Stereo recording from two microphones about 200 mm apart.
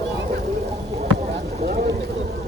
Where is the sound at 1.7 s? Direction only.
45° right (ahead or behind).